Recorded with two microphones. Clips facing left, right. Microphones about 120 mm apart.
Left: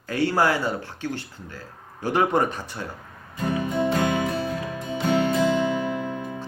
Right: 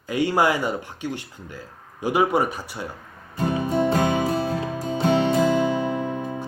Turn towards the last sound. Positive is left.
turn(degrees=-40)  # may be behind; listen again after turning